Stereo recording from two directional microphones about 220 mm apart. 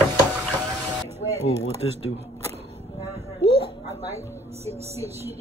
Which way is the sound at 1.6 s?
30° right (ahead or behind).